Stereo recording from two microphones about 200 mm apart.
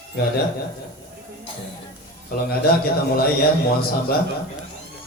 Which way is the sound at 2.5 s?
50° left (ahead or behind).